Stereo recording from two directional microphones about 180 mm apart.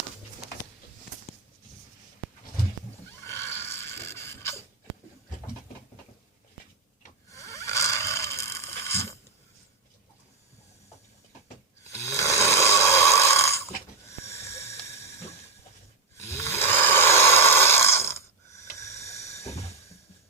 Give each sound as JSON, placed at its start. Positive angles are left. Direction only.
{"t": 3.2, "sound": "snoring", "side_deg": 15}
{"t": 7.3, "sound": "a sound", "side_deg": 15}
{"t": 11.8, "sound": "snoring", "side_deg": 15}
{"t": 16.1, "sound": "snoring", "side_deg": 15}